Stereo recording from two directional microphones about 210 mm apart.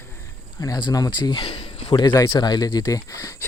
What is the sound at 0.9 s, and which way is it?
Speech, 20° left (ahead or behind).